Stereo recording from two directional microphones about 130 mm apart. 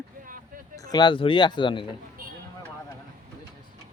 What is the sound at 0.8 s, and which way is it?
Speech, 35° left (ahead or behind).